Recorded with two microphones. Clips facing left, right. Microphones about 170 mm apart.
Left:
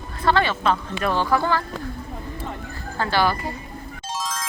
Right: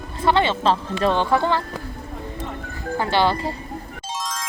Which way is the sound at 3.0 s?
20° right (ahead or behind).